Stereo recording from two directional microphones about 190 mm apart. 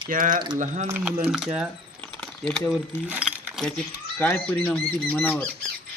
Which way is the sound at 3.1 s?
5° right (ahead or behind).